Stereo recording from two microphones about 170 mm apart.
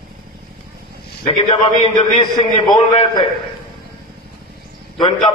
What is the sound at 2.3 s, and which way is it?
Speech, 25° left (ahead or behind).